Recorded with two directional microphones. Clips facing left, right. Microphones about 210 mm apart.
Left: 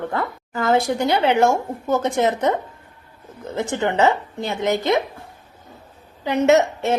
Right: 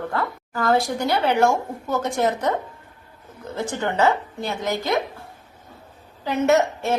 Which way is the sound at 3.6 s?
20° left (ahead or behind).